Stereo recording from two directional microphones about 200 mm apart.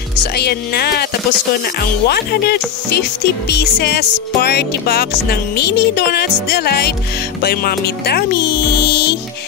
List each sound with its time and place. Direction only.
0.4 s speech: 55° left (ahead or behind)
2.0 s speech: 50° left (ahead or behind)
8.7 s music: 55° left (ahead or behind)